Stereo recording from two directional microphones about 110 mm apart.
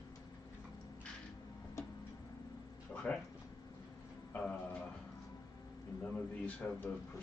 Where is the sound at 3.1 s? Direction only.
10° left (ahead or behind).